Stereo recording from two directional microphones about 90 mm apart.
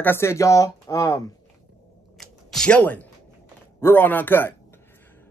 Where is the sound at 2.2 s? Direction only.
5° left (ahead or behind).